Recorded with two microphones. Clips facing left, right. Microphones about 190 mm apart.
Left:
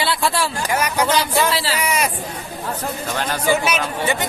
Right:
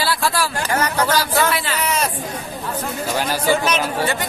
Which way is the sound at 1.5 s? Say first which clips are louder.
Left 1 dB; 35° left (ahead or behind).